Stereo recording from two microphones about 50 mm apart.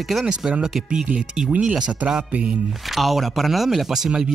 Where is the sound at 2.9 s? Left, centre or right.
Centre.